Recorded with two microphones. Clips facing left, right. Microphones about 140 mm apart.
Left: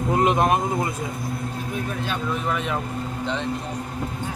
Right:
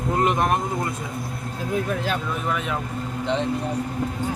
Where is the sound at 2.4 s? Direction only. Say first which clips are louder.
Even; centre (ahead or behind).